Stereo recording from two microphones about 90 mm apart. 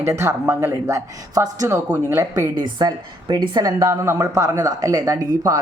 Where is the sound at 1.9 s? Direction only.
25° right (ahead or behind).